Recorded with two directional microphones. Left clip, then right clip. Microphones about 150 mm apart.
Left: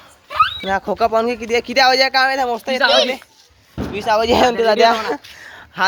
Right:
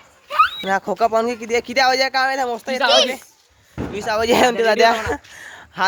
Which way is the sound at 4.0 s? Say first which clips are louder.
Left 5 dB; 5° right (ahead or behind).